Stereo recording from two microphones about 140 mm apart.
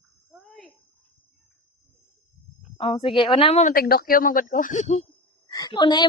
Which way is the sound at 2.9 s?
35° left (ahead or behind).